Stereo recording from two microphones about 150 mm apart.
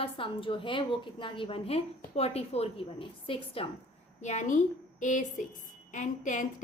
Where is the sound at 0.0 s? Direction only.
35° left (ahead or behind).